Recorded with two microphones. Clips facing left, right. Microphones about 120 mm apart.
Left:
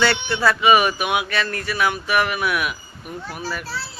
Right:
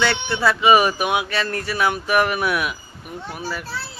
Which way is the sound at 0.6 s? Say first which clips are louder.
Right 2 dB; 30° right (ahead or behind).